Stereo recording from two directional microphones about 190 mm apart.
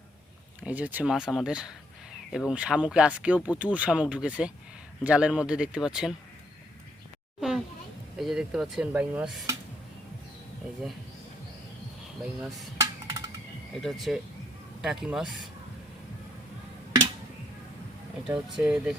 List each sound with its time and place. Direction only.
0.6 s speech: 10° right (ahead or behind)
8.2 s speech: centre (ahead or behind)
12.2 s speech: centre (ahead or behind)
12.8 s music: 20° right (ahead or behind)
13.8 s speech: centre (ahead or behind)
18.3 s speech: 5° right (ahead or behind)